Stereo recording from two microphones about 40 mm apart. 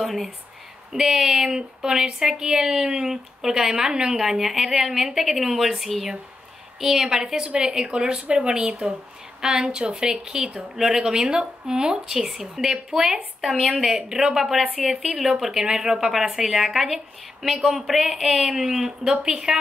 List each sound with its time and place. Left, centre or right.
0.0 s speech: centre
0.9 s a woman's voice: centre
12.7 s a woman's voice: right; by 18.1 s centre
18.1 s a woman's voice: right